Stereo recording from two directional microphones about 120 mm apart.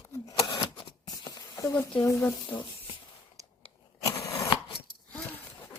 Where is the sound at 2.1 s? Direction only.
15° left (ahead or behind).